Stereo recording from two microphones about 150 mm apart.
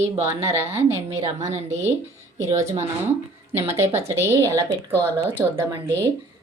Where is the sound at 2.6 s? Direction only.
50° right (ahead or behind).